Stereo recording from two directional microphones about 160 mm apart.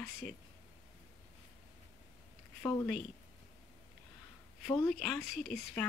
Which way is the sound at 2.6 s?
15° left (ahead or behind).